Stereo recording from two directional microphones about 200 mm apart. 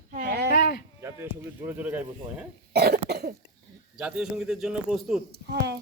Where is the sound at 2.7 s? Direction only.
50° right (ahead or behind).